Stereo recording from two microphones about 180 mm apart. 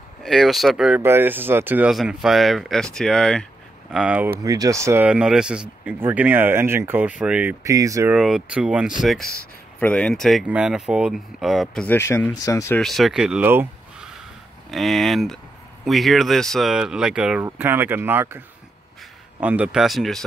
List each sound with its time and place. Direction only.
0.2 s speech: centre (ahead or behind)
4.4 s speech: 20° right (ahead or behind)
7.6 s speech: 20° right (ahead or behind)
8.1 s speech: 5° right (ahead or behind); by 12.8 s 15° left (ahead or behind)
12.8 s speech: centre (ahead or behind)
14.7 s speech: centre (ahead or behind)
19.4 s speech: 5° right (ahead or behind)